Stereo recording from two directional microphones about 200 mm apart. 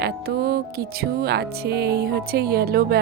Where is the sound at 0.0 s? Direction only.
50° right (ahead or behind).